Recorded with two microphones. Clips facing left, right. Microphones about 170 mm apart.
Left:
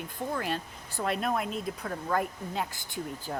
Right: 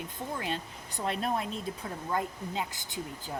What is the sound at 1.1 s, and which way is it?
Speech, 25° right (ahead or behind).